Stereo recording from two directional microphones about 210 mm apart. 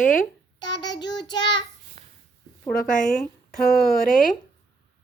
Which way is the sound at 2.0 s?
30° right (ahead or behind).